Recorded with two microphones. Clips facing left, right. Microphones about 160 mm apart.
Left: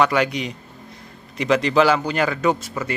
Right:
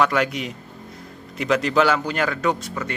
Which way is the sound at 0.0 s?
Centre (ahead or behind).